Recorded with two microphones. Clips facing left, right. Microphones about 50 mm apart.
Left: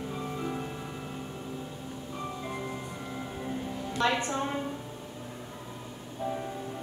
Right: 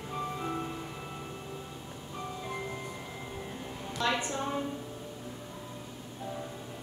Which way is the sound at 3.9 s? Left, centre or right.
Left.